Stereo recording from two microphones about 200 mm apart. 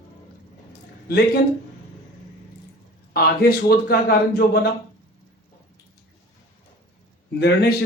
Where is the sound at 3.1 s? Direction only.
50° left (ahead or behind).